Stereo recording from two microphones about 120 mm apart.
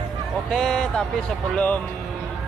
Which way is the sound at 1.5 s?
10° left (ahead or behind).